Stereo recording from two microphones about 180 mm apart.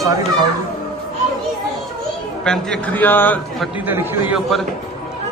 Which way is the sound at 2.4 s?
5° left (ahead or behind).